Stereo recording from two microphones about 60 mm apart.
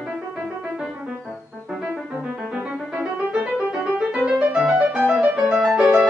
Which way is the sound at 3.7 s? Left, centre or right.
Centre.